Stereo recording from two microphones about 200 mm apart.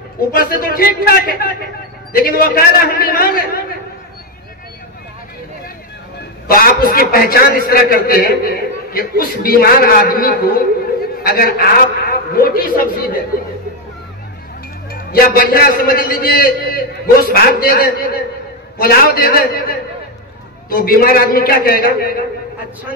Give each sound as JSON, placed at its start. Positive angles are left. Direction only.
{"t": 0.3, "sound": "a man's voice", "side_deg": 45}
{"t": 6.4, "sound": "a man's voice", "side_deg": 45}
{"t": 11.0, "sound": "a sound", "side_deg": 45}
{"t": 12.1, "sound": "a man's voice", "side_deg": 45}
{"t": 14.9, "sound": "a man's voice", "side_deg": 50}
{"t": 20.7, "sound": "a man's voice", "side_deg": 45}